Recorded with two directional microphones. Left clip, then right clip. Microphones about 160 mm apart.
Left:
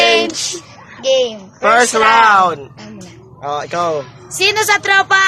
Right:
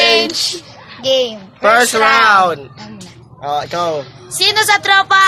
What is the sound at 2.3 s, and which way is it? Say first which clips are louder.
Speech: even; 10° right (ahead or behind).